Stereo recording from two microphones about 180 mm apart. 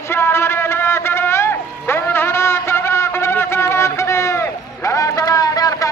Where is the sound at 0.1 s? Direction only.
15° left (ahead or behind).